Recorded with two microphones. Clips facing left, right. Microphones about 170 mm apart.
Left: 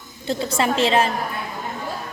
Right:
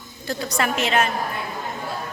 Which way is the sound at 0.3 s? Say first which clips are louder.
Left 3 dB; 25° left (ahead or behind).